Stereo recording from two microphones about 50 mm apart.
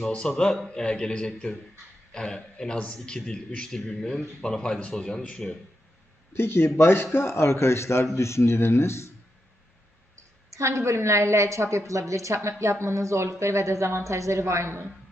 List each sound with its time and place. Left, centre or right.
0.1 s a man's voice: centre
6.3 s a man's voice: left
10.5 s a woman's voice: right
12.8 s a woman's voice: right
13.4 s a woman's voice: right